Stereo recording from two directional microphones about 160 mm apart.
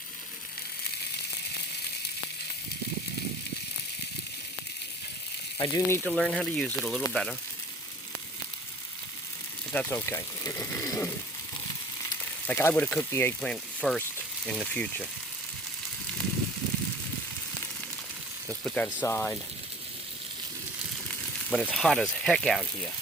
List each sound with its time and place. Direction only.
5.5 s speech: 25° left (ahead or behind)
6.1 s speech: centre (ahead or behind)
9.7 s speech: 15° left (ahead or behind)
18.4 s a sound: 10° left (ahead or behind)
19.0 s speech: 10° left (ahead or behind)
21.1 s speech: centre (ahead or behind)